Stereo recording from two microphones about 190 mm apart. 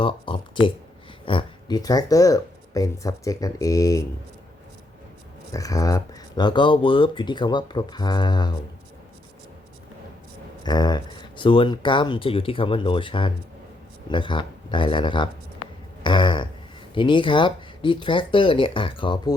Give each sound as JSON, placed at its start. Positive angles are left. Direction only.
{"t": 0.0, "sound": "a sound", "side_deg": 25}
{"t": 1.2, "sound": "speech", "side_deg": 25}
{"t": 5.5, "sound": "speech", "side_deg": 20}
{"t": 10.6, "sound": "speech", "side_deg": 20}